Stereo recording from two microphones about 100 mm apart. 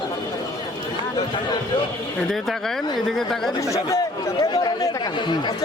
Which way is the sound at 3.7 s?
35° left (ahead or behind).